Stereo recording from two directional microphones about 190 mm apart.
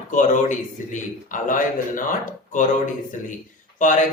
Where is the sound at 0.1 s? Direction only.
40° left (ahead or behind).